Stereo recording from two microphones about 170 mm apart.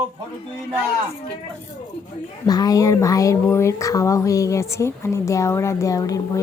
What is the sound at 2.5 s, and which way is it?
Speech, 20° left (ahead or behind).